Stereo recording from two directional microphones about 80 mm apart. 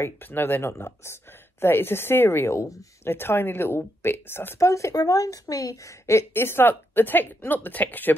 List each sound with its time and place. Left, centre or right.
0.0 s speech: left
4.6 s a woman's voice: left